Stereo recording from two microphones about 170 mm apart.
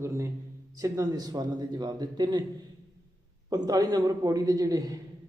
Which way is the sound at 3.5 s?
20° right (ahead or behind).